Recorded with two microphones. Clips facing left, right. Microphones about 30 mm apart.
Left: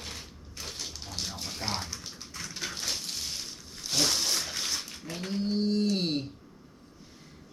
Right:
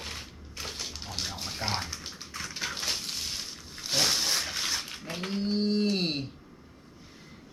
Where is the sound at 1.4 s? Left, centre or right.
Centre.